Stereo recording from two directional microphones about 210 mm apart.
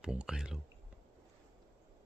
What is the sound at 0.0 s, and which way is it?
Speech, 5° right (ahead or behind).